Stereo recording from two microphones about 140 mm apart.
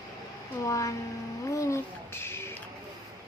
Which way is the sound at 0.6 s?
25° left (ahead or behind).